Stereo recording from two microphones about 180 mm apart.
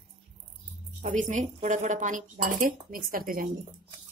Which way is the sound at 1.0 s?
45° right (ahead or behind).